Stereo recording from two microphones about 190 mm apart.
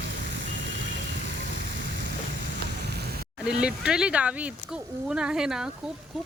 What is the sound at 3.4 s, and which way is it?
Speech, 5° right (ahead or behind).